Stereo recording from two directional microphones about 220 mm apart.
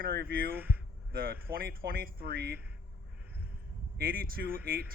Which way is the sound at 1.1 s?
45° right (ahead or behind).